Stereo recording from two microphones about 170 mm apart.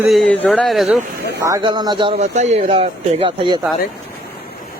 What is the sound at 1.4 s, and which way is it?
Speech, 25° right (ahead or behind).